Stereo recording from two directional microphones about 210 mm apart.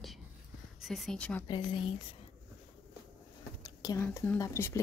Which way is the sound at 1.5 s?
25° left (ahead or behind).